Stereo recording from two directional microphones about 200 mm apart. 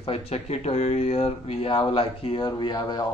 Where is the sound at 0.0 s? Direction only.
30° left (ahead or behind).